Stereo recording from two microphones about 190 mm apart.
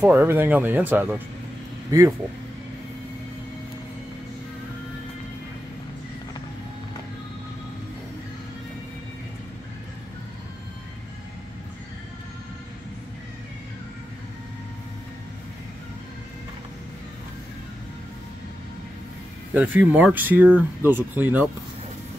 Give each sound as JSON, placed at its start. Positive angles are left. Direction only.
{"t": 0.0, "sound": "speech", "side_deg": -10}
{"t": 19.5, "sound": "speech", "side_deg": -10}